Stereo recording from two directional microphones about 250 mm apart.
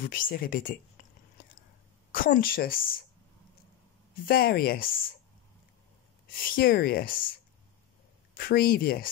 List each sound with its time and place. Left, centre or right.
0.0 s speech: left
1.0 s a sound: left
2.1 s speech: left
4.3 s speech: left
6.3 s speech: left
8.4 s speech: left